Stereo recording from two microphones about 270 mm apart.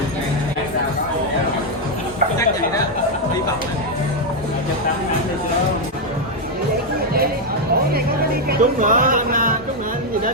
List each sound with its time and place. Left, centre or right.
8.4 s speech: right